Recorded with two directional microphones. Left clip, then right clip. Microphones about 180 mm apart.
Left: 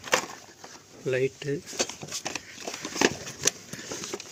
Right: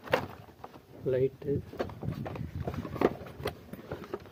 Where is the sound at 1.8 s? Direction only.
35° left (ahead or behind).